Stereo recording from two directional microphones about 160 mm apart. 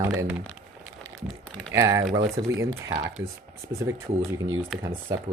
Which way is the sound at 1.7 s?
20° right (ahead or behind).